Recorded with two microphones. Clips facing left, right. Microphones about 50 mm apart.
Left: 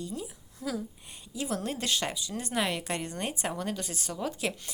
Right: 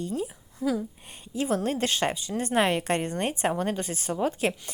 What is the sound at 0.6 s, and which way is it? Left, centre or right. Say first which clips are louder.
Speech: right 7 dB; centre.